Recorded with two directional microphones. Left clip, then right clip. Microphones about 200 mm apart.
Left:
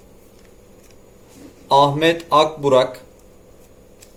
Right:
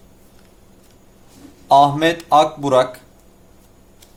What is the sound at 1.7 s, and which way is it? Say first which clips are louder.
Speech: right 2 dB; 55° right (ahead or behind).